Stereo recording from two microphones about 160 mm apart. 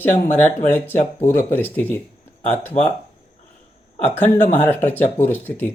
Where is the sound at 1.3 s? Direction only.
10° left (ahead or behind).